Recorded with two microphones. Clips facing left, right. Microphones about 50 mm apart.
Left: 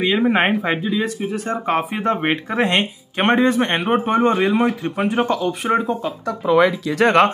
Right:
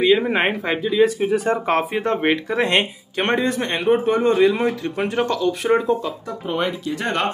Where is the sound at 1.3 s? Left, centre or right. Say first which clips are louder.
Right 4 dB; centre.